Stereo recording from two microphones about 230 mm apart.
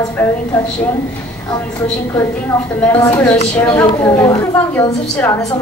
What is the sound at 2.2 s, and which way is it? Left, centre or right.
A woman's voice, centre.